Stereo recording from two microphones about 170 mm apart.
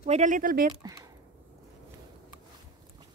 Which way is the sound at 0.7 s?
20° right (ahead or behind).